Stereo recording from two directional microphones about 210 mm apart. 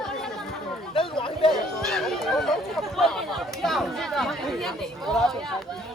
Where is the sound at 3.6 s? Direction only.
Centre (ahead or behind).